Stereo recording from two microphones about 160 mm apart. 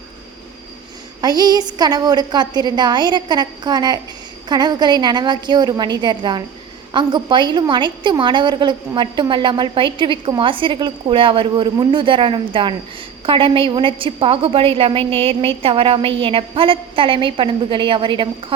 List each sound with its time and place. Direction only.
1.2 s a woman's voice: 25° right (ahead or behind)